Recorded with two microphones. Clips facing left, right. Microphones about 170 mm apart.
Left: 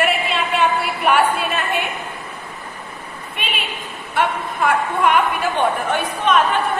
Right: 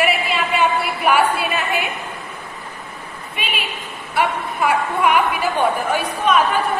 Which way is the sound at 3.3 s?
Centre (ahead or behind).